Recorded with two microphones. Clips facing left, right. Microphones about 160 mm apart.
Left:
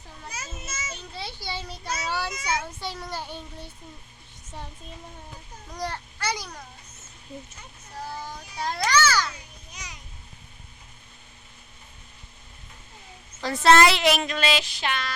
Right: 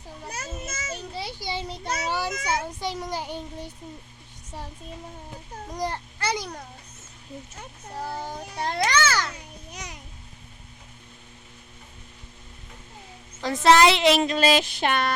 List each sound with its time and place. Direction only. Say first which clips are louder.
0.3 s a child's voice: right 3 dB; 60° right (ahead or behind)
1.1 s a child's voice: right 2 dB; 15° right (ahead or behind)
5.7 s a child's voice: right 2 dB; 20° right (ahead or behind)
8.4 s a child's voice: even; 55° right (ahead or behind)
8.7 s a child's voice: left 1 dB; 25° right (ahead or behind)
9.7 s music: right 4 dB; 55° right (ahead or behind)
13.4 s speech: right 1 dB; 20° right (ahead or behind); by 15.1 s 55° right (ahead or behind)